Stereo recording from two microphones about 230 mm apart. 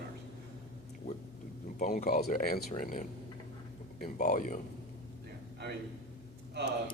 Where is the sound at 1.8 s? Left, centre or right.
Left.